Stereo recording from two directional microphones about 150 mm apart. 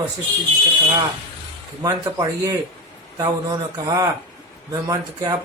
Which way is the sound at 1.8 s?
25° right (ahead or behind).